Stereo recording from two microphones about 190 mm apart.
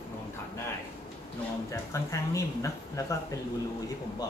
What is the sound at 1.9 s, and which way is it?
Speech, 15° left (ahead or behind).